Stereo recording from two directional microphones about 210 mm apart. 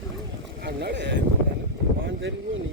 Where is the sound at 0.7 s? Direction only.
55° right (ahead or behind).